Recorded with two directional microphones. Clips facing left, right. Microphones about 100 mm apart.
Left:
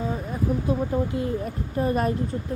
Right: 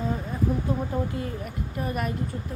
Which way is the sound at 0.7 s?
25° left (ahead or behind).